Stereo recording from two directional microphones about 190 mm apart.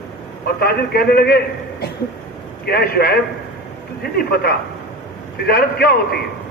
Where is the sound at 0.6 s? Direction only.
55° left (ahead or behind).